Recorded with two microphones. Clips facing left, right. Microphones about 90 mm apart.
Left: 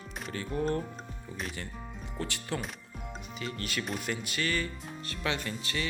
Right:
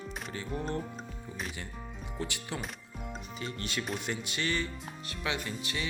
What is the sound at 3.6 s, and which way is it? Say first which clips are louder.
Music: even; 25° right (ahead or behind).